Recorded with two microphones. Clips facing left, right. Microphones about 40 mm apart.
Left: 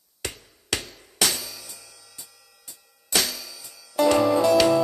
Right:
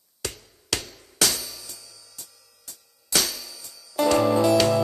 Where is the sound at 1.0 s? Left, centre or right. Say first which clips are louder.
Even; left.